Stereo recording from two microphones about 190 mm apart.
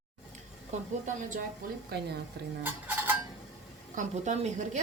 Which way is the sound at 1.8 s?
55° right (ahead or behind).